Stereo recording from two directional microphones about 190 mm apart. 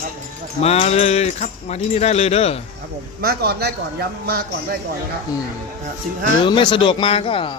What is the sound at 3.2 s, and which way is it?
A man's voice, 55° right (ahead or behind).